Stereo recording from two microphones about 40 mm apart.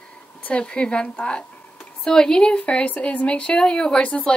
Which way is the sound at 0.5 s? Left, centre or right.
Left.